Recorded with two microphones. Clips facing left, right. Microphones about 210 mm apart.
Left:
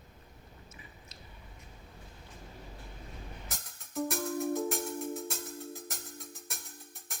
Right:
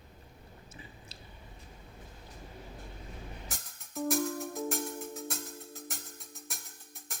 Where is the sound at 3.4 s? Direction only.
Centre (ahead or behind).